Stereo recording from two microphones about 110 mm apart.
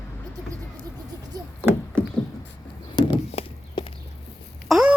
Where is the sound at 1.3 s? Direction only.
35° right (ahead or behind).